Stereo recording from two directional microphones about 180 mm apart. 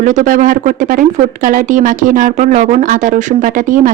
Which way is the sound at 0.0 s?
45° right (ahead or behind).